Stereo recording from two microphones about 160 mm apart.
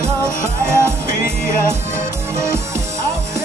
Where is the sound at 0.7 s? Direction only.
15° right (ahead or behind).